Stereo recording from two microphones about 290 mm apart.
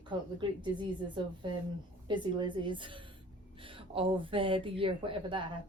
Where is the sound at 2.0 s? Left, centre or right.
Centre.